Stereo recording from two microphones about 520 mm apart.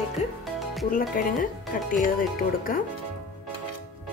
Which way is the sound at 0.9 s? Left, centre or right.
Centre.